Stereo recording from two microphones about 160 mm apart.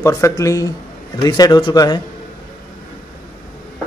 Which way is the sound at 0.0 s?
20° left (ahead or behind).